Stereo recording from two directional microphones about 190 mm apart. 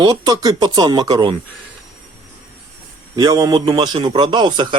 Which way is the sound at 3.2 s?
20° right (ahead or behind).